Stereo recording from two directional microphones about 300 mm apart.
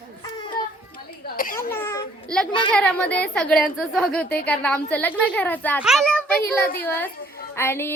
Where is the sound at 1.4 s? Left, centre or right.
Left.